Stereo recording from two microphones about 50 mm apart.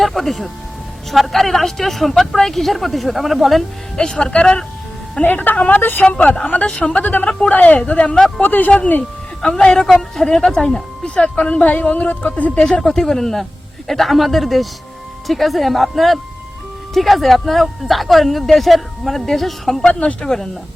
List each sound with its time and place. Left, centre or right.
0.0 s speech: centre
3.9 s speech: centre
5.2 s a woman's voice: left
5.8 s speech: left
6.1 s a woman's voice: left
7.3 s speech: left
7.5 s a woman's voice: left
8.4 s a woman's voice: left
9.4 s speech: centre
11.0 s speech: left
12.8 s speech: centre
19.9 s speech: left
20.2 s speech: centre